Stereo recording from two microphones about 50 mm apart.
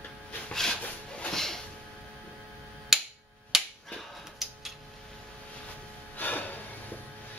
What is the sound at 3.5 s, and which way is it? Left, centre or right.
Finger snapping, centre.